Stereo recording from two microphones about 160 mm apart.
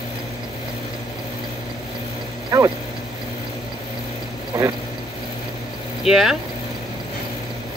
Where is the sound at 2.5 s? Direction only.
20° right (ahead or behind).